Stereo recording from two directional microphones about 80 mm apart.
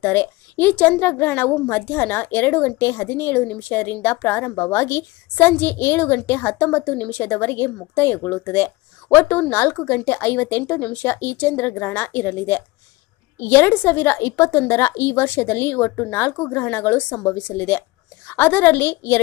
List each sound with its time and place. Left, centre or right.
0.0 s a woman's voice: left
11.1 s a woman's voice: left